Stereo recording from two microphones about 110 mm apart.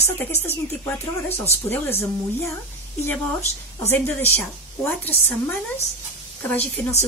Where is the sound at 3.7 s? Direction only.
20° left (ahead or behind).